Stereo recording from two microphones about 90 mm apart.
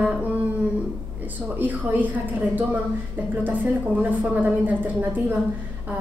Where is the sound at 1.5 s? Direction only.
20° right (ahead or behind).